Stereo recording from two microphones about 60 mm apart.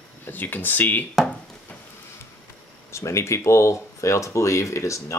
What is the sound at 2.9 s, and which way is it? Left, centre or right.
Speech, left.